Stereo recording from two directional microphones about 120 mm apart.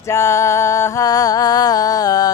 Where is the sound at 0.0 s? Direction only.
25° left (ahead or behind).